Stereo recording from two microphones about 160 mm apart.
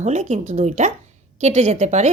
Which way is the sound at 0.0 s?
45° right (ahead or behind).